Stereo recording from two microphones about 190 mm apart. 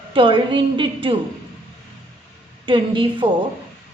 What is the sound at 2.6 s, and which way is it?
Speech, 25° right (ahead or behind).